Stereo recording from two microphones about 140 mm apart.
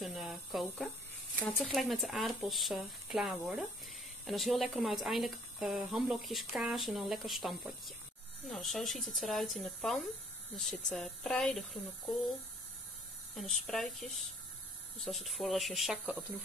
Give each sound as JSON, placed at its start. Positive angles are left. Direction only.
{"t": 0.0, "sound": "a sound", "side_deg": 0}
{"t": 1.4, "sound": "speech", "side_deg": 0}
{"t": 13.3, "sound": "speech", "side_deg": 0}